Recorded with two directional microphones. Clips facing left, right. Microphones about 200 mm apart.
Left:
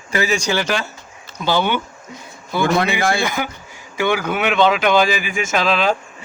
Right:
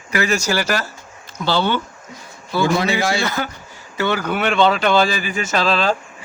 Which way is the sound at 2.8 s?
55° left (ahead or behind).